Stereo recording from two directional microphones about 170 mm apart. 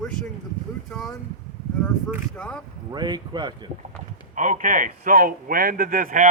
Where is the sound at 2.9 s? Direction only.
25° right (ahead or behind).